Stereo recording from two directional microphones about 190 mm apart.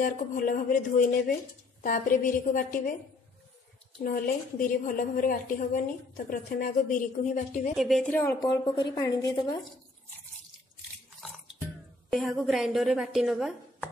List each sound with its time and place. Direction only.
0.0 s a woman's voice: 45° left (ahead or behind)
4.0 s a woman's voice: 50° left (ahead or behind)
7.7 s a woman's voice: centre (ahead or behind)
8.1 s a woman's voice: 10° left (ahead or behind)
12.1 s a woman's voice: centre (ahead or behind)